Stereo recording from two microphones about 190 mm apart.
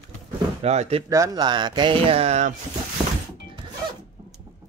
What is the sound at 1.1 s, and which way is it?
Speech, 20° right (ahead or behind).